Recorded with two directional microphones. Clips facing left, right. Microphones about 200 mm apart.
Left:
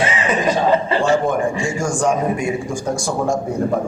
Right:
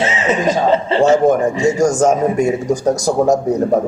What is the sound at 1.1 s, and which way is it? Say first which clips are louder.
A man's voice: right 5 dB; 40° right (ahead or behind).